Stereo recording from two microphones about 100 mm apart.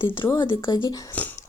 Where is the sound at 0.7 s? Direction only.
50° left (ahead or behind).